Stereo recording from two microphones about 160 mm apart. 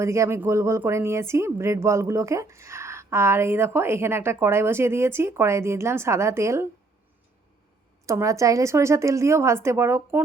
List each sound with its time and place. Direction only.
0.0 s speech: 20° right (ahead or behind)
8.0 s speech: 20° right (ahead or behind)